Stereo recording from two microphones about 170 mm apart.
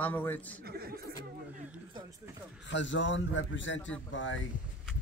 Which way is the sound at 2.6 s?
90° left.